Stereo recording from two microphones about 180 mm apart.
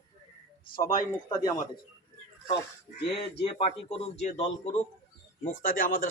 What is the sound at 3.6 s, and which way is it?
Speech, 40° left (ahead or behind).